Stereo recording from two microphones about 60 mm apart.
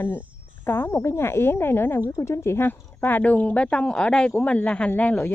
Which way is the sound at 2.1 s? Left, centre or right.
Left.